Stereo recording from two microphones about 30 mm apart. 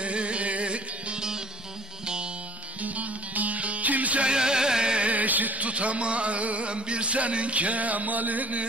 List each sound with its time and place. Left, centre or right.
0.0 s music: right
2.8 s music: right
4.4 s music: right
5.1 s music: right
5.7 s music: right